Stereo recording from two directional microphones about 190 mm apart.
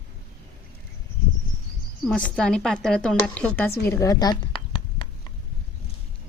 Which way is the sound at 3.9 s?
15° left (ahead or behind).